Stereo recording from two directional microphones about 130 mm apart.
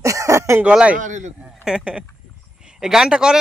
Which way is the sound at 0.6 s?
10° right (ahead or behind).